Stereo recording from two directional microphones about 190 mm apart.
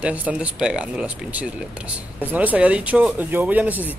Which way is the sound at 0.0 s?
10° right (ahead or behind).